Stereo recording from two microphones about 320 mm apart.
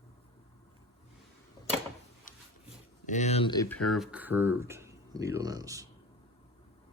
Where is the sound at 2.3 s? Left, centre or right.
Left.